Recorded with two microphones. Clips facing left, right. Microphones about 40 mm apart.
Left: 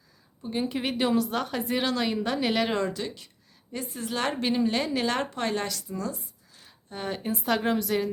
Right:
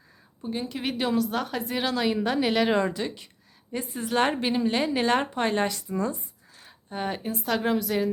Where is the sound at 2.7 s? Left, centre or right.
Centre.